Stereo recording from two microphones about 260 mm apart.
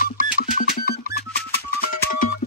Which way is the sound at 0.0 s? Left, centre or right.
Left.